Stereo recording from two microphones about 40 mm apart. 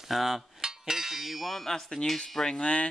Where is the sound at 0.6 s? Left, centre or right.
Centre.